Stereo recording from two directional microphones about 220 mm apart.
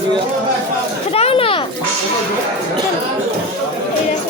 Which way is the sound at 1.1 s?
25° left (ahead or behind).